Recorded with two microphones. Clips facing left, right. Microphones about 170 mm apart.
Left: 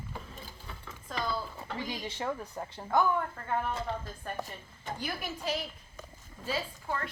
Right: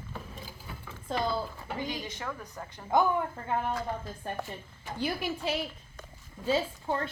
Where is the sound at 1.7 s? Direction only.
25° left (ahead or behind).